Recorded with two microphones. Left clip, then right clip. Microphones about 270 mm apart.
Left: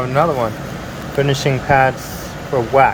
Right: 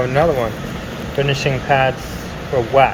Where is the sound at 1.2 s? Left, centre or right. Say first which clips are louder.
Left 1 dB; left.